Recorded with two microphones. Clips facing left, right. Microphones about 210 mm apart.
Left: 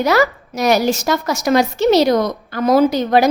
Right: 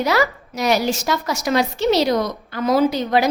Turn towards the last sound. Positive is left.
turn(degrees=45)  # may be behind; listen again after turning